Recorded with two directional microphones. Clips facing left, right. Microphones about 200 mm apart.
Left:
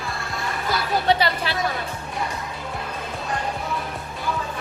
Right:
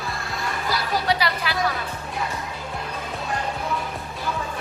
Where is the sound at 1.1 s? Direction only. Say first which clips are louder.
Left 5 dB; 30° left (ahead or behind).